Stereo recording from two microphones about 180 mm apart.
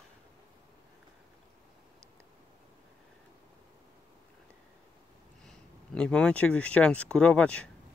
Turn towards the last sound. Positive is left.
turn(degrees=5)  # may be behind; listen again after turning